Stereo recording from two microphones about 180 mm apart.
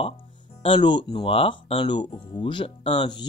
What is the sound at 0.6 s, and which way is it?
Speech, 30° left (ahead or behind).